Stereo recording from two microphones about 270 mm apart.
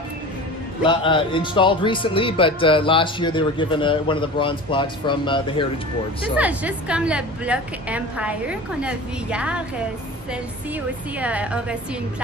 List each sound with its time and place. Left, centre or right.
0.9 s speech: centre
6.3 s a woman's voice: centre
11.2 s a woman's voice: centre